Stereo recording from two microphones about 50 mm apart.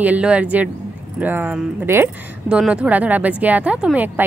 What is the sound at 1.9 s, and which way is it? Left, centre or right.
Speech, right.